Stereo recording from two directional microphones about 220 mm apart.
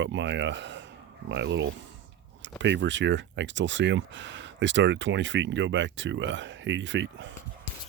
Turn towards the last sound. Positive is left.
turn(degrees=-55)  # may be behind; listen again after turning